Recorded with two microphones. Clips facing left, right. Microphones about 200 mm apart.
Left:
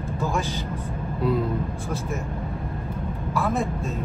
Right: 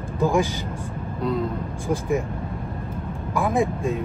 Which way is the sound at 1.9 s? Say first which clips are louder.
Right 6 dB; 15° right (ahead or behind).